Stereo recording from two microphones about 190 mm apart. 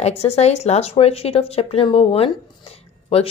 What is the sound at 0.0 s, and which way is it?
Speech, 35° left (ahead or behind).